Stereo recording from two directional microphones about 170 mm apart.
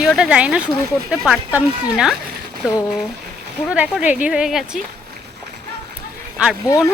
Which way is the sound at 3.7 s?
5° right (ahead or behind).